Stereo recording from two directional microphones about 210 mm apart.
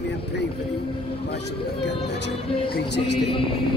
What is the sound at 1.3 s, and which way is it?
Speech, 55° left (ahead or behind).